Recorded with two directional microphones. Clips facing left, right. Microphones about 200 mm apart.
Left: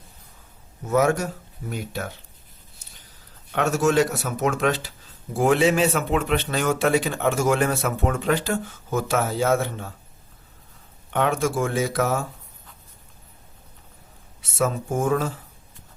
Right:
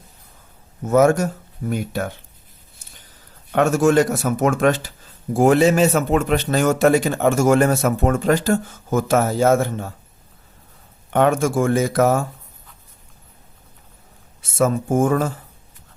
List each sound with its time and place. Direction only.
0.9 s a man's voice: 45° right (ahead or behind)
3.5 s a man's voice: 50° right (ahead or behind)
11.1 s a man's voice: 45° right (ahead or behind)
14.6 s a man's voice: 50° right (ahead or behind)